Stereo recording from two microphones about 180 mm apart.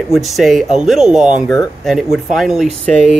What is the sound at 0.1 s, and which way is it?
Speech, centre (ahead or behind).